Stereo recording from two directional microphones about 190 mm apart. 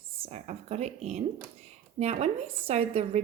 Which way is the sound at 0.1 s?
30° right (ahead or behind).